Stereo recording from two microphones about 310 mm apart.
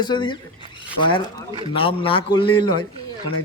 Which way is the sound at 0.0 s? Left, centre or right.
Centre.